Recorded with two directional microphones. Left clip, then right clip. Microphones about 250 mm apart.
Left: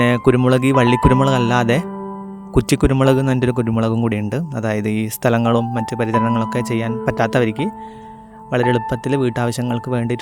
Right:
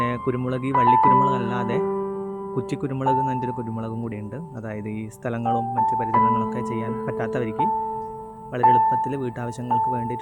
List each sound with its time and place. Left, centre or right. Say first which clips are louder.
0.0 s a man's voice: left 10 dB; left